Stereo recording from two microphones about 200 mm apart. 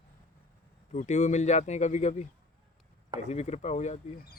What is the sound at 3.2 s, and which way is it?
Speech, 35° left (ahead or behind).